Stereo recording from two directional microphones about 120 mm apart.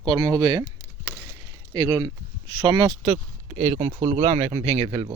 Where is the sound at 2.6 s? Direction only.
45° right (ahead or behind).